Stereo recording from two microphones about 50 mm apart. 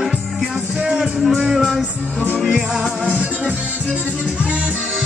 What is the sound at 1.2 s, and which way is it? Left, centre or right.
Music, centre.